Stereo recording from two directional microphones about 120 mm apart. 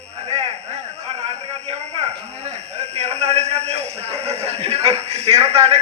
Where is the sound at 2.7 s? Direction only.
65° right (ahead or behind).